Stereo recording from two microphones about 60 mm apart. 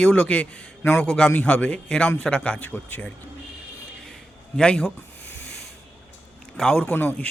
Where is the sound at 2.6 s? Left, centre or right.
Left.